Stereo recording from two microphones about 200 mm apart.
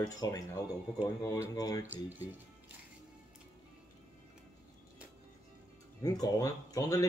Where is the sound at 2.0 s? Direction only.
10° right (ahead or behind).